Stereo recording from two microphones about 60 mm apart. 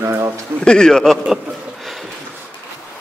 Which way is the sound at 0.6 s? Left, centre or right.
Centre.